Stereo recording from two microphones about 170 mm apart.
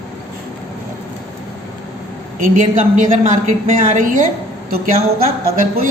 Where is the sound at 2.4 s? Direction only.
50° right (ahead or behind).